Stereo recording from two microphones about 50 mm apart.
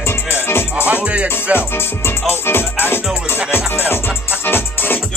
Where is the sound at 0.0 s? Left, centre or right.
Left.